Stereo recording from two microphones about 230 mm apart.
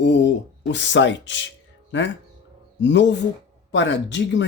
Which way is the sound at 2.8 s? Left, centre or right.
Left.